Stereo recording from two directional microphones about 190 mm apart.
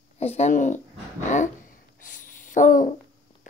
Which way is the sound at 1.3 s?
40° left (ahead or behind).